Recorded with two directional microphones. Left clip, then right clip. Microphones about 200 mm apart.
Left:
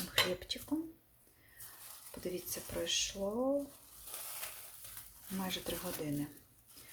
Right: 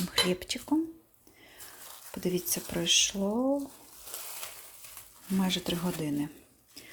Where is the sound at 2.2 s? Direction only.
40° right (ahead or behind).